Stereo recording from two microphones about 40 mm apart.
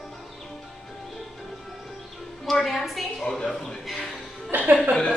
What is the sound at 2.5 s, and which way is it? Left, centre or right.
Speech, centre.